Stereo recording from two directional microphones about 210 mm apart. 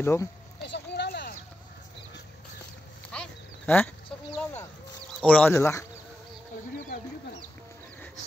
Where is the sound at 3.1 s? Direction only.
5° left (ahead or behind).